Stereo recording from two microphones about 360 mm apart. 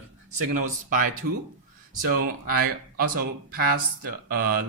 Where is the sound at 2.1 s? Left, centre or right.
Right.